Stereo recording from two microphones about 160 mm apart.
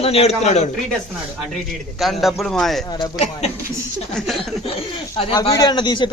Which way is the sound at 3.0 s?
40° left (ahead or behind).